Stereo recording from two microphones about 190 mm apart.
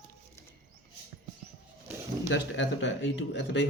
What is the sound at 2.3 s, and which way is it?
Speech, 70° left (ahead or behind).